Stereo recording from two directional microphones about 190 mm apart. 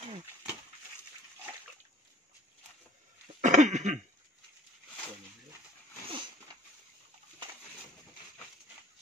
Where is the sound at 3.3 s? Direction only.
40° right (ahead or behind).